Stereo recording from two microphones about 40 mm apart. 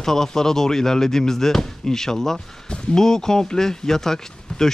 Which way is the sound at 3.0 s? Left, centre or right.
Centre.